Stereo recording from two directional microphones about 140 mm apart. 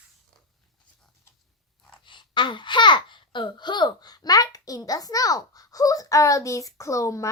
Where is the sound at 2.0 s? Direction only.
35° left (ahead or behind).